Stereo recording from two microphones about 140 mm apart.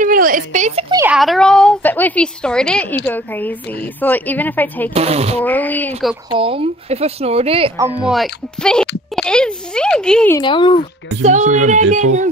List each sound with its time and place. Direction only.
0.0 s a sound: 80° right; by 0.8 s 55° right (ahead or behind)
1.0 s a woman's voice: centre (ahead or behind)
4.9 s speech: 45° right (ahead or behind)
5.4 s a woman's voice: 10° left (ahead or behind)
6.3 s speech: 40° right (ahead or behind)
8.1 s speech: 5° left (ahead or behind)
10.4 s speech: 35° left (ahead or behind)
11.2 s child singing: 60° right (ahead or behind)